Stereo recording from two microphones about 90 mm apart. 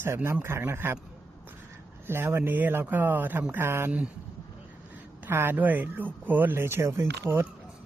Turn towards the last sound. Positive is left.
turn(degrees=-30)  # may be behind; listen again after turning